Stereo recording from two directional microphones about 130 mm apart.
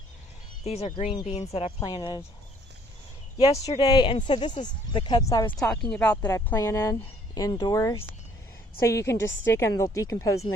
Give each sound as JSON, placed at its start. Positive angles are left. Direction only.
{"t": 0.6, "sound": "speech", "side_deg": 55}
{"t": 1.8, "sound": "speech", "side_deg": 30}
{"t": 3.3, "sound": "speech", "side_deg": 50}
{"t": 3.8, "sound": "speech", "side_deg": 35}
{"t": 5.5, "sound": "speech", "side_deg": 10}
{"t": 6.3, "sound": "a woman's voice", "side_deg": 20}